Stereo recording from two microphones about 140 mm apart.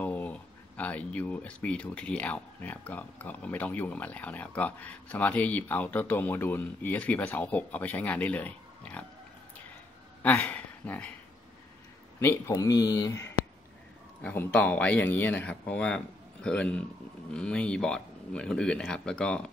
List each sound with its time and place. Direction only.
0.0 s speech: 10° left (ahead or behind)
10.2 s speech: 10° left (ahead or behind)
12.2 s speech: 20° left (ahead or behind)
14.2 s speech: 10° left (ahead or behind)